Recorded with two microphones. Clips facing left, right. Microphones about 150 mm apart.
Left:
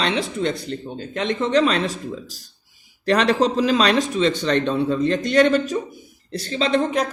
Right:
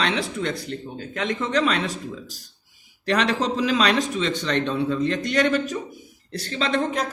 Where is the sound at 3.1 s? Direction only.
35° left (ahead or behind).